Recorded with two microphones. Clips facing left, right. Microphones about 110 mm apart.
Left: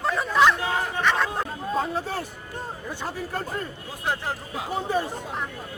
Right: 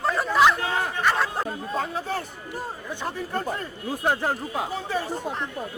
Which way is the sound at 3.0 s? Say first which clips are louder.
Right 2 dB; centre (ahead or behind).